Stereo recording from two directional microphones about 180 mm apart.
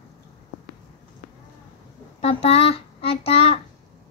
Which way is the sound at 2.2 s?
35° left (ahead or behind).